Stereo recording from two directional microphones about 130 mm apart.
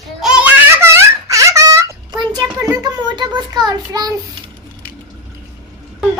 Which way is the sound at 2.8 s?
35° right (ahead or behind).